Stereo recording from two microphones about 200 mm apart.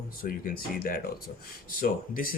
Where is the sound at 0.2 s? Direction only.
45° left (ahead or behind).